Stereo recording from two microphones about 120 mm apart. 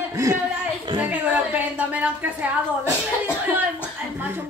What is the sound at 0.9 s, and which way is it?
A woman's voice, 10° right (ahead or behind).